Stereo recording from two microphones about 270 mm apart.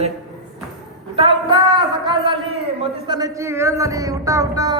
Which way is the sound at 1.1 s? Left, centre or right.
Centre.